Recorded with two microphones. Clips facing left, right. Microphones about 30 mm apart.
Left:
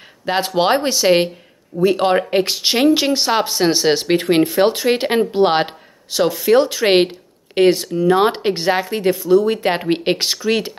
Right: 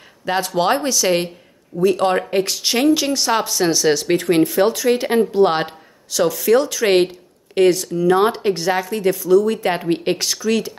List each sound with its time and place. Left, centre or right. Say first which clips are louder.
0.2 s speech: left 2 dB; left